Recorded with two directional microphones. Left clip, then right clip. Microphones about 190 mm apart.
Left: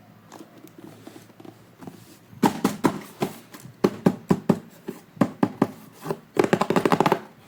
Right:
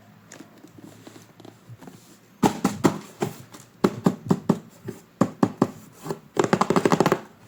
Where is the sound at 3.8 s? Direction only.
15° left (ahead or behind).